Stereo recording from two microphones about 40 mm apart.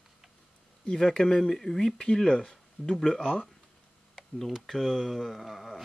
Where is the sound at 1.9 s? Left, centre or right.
Centre.